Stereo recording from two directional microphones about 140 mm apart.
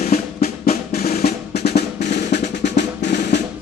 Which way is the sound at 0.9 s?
90° left.